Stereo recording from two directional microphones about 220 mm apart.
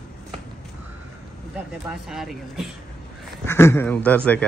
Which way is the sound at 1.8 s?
Centre (ahead or behind).